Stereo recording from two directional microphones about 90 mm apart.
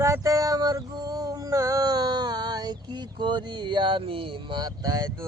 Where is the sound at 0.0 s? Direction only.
35° right (ahead or behind); by 4.3 s 85° right.